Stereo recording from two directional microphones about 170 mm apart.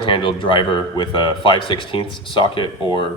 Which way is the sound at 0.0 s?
30° left (ahead or behind).